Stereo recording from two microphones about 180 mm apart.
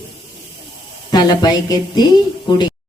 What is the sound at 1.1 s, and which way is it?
Speech, 25° left (ahead or behind).